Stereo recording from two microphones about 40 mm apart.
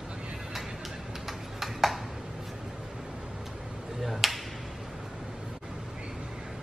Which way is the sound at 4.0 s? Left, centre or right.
Centre.